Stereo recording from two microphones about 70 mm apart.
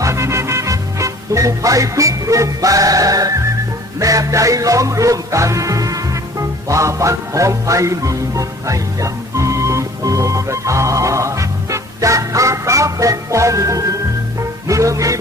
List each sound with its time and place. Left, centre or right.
0.0 s music: right